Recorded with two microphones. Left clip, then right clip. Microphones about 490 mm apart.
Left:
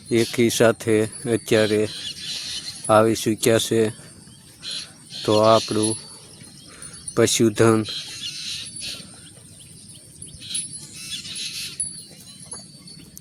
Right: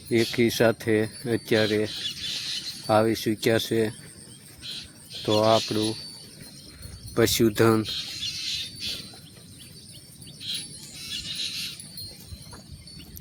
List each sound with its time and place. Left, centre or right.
0.1 s speech: right
4.6 s cricket: right
7.1 s bird: right
10.5 s a sound: right